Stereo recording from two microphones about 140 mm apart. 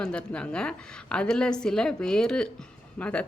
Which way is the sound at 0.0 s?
5° left (ahead or behind).